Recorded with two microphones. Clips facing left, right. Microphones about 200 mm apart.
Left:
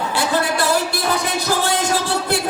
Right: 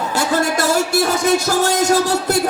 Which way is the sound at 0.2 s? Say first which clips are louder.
Right 2 dB; 45° right (ahead or behind).